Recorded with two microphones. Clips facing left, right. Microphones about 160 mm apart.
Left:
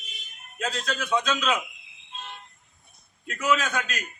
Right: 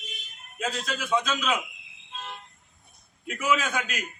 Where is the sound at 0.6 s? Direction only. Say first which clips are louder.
Left 1 dB; 5° right (ahead or behind).